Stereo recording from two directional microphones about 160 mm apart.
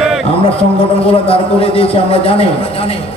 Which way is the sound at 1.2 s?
35° left (ahead or behind).